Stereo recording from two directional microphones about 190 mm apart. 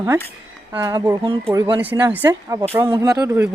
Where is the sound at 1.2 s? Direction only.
30° right (ahead or behind).